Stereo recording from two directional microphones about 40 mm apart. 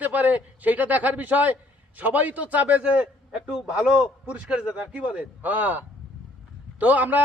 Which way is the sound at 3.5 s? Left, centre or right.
Centre.